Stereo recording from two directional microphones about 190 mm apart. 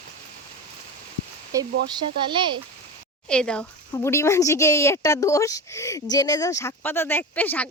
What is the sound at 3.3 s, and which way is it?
Speech, 5° left (ahead or behind).